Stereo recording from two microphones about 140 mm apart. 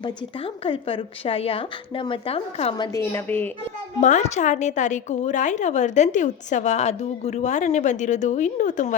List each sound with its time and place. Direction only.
0.0 s a woman's voice: 40° left (ahead or behind)
2.7 s a woman's voice: 30° left (ahead or behind)
3.0 s a woman's voice: 15° left (ahead or behind)
4.0 s a woman's voice: 55° left (ahead or behind)